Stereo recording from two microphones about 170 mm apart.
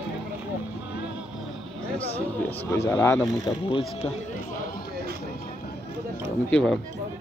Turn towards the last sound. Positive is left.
turn(degrees=5)  # may be behind; listen again after turning